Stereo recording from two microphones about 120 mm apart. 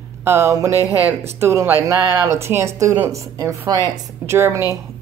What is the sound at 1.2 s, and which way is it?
A woman's voice, 20° right (ahead or behind).